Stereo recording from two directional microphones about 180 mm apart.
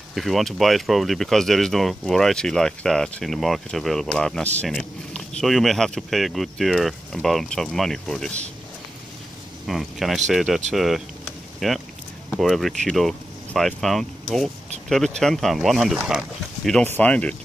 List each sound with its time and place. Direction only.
0.1 s speech: centre (ahead or behind)
9.7 s speech: centre (ahead or behind)